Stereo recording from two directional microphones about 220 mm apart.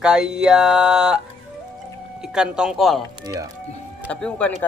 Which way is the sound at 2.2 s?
5° right (ahead or behind).